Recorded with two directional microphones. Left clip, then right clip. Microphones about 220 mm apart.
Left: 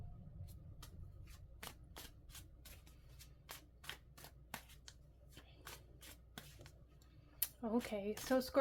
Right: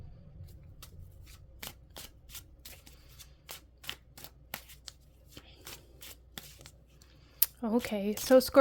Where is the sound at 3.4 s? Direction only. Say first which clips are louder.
Right 9 dB; 45° right (ahead or behind).